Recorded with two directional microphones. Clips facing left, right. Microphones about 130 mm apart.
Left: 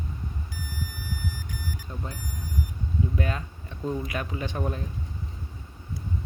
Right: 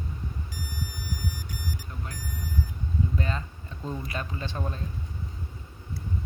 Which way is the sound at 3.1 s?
10° left (ahead or behind).